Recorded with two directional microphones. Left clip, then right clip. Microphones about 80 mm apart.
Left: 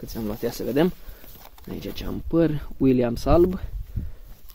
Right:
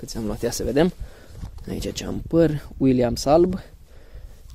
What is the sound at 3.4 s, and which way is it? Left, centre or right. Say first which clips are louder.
Speech: even; right.